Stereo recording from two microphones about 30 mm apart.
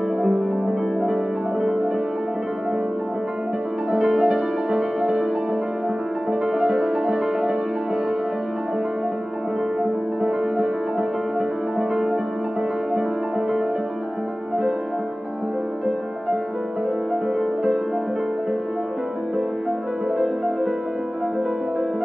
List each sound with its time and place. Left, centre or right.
0.2 s music: centre
1.6 s music: right
4.2 s music: right
6.4 s music: right
9.8 s music: right
20.2 s music: right